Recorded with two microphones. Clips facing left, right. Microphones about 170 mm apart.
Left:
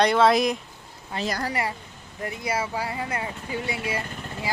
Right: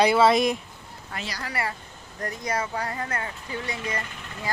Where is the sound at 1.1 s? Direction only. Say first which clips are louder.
Left 5 dB; 25° left (ahead or behind).